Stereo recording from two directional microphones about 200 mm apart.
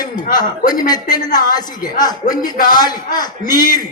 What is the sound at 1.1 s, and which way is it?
A man's voice, 20° left (ahead or behind).